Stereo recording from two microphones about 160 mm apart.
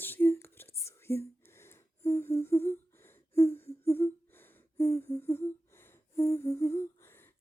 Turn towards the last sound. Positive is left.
turn(degrees=15)  # may be behind; listen again after turning